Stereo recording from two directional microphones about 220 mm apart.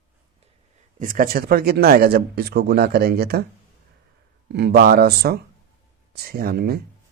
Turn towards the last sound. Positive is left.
turn(degrees=-45)  # may be behind; listen again after turning